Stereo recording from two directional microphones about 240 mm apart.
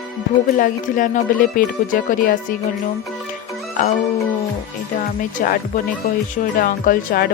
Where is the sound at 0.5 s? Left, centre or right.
Left.